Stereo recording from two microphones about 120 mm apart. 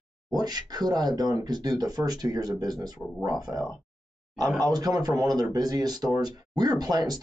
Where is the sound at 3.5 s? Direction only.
20° right (ahead or behind).